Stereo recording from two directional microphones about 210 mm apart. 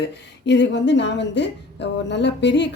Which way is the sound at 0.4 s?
55° left (ahead or behind).